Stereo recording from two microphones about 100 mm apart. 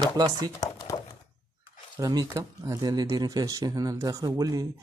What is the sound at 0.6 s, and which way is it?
Crumpling, 40° left (ahead or behind).